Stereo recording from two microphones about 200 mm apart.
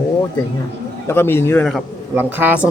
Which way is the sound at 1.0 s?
10° left (ahead or behind).